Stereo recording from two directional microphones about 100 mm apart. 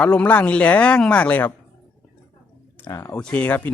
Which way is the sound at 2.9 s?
30° left (ahead or behind).